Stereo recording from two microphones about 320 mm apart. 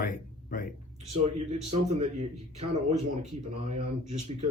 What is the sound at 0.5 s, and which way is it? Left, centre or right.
Speech, left.